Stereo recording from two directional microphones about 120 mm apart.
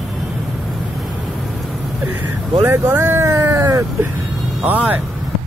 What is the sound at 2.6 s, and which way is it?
Speech, 20° right (ahead or behind).